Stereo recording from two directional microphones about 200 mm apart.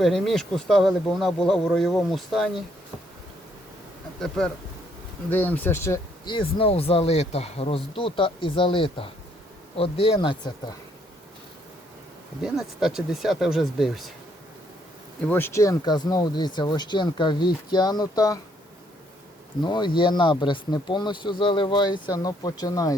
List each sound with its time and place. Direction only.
0.0 s speech: centre (ahead or behind)
4.2 s speech: 5° left (ahead or behind); by 10.8 s 20° left (ahead or behind)
12.4 s speech: centre (ahead or behind)
15.2 s speech: 10° left (ahead or behind)
19.6 s speech: 20° left (ahead or behind)